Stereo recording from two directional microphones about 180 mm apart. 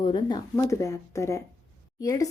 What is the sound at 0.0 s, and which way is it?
Speech, 25° left (ahead or behind).